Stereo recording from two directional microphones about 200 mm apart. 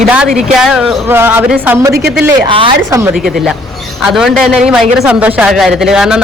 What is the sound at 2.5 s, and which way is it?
Speech, 25° right (ahead or behind).